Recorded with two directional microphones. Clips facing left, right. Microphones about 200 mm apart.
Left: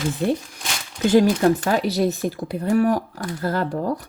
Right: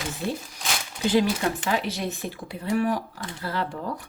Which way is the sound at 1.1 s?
45° left (ahead or behind).